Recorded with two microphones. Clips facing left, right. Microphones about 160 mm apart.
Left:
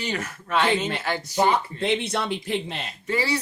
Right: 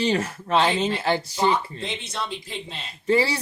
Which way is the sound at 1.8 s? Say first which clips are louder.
Left 7 dB; 60° left (ahead or behind).